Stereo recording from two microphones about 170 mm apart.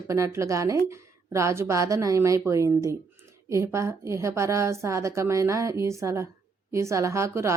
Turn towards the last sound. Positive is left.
turn(degrees=-15)  # may be behind; listen again after turning